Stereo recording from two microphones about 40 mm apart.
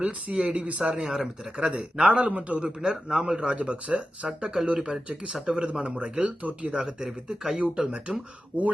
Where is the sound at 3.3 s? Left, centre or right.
Right.